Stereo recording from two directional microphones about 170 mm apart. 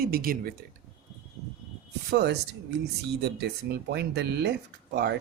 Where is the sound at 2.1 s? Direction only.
75° right (ahead or behind).